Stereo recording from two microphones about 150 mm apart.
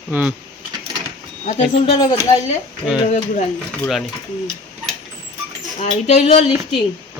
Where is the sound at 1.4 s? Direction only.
50° left (ahead or behind).